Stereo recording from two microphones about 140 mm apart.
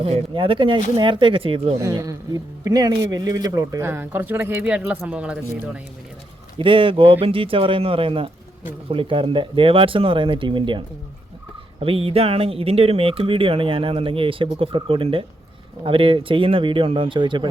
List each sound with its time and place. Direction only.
0.0 s speech: 40° right (ahead or behind)
1.8 s a man's voice: 25° right (ahead or behind); by 5.8 s 10° right (ahead or behind)
6.6 s speech: 40° right (ahead or behind)